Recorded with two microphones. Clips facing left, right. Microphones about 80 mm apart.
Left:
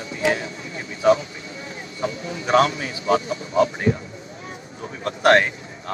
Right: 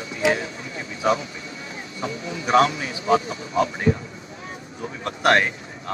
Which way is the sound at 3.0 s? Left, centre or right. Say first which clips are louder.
Even; right.